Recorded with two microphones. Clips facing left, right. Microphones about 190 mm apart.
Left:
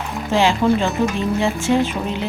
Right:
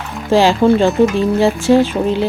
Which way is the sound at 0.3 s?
35° right (ahead or behind).